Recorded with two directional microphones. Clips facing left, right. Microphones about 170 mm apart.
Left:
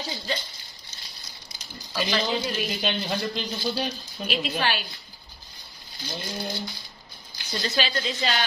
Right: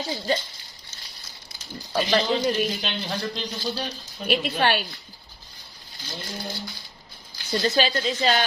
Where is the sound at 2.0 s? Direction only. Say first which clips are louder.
Right 4 dB; 40° right (ahead or behind).